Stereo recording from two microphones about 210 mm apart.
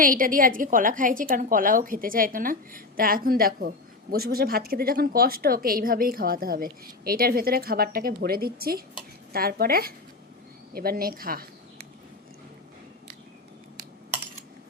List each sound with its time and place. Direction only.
0.0 s a woman's voice: 40° right (ahead or behind)